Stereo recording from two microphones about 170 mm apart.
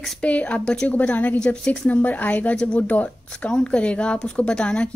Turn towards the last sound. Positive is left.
turn(degrees=5)  # may be behind; listen again after turning